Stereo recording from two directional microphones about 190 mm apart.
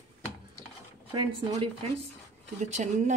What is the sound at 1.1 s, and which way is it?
Speech, 25° right (ahead or behind).